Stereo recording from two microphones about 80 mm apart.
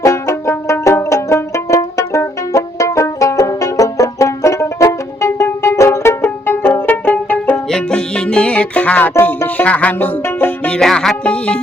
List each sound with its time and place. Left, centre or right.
0.0 s music: left
10.7 s music: centre
11.2 s speech: centre